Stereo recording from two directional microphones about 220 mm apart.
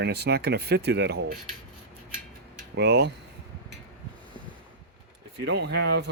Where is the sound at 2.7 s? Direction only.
50° right (ahead or behind).